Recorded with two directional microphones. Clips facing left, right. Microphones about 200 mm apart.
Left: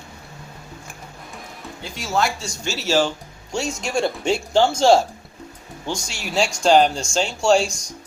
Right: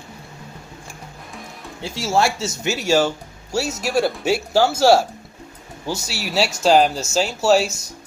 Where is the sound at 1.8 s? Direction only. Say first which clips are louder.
Right 3 dB; 25° right (ahead or behind).